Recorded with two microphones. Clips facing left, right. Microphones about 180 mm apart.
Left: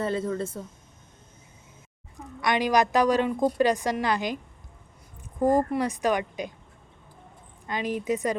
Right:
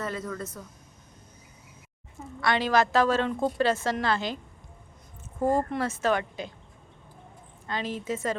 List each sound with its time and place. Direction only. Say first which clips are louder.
0.0 s speech: left 6 dB; 30° left (ahead or behind)
2.1 s a woman's voice: left 1 dB; 15° left (ahead or behind)
5.4 s a woman's voice: left 3 dB; 15° left (ahead or behind)
7.7 s a woman's voice: left 4 dB; 15° left (ahead or behind)